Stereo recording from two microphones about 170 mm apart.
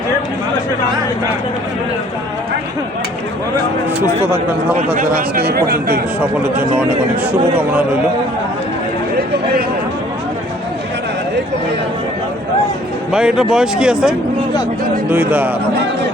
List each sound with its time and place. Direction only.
4.9 s speech: 60° right (ahead or behind)
13.1 s a man's voice: 5° right (ahead or behind)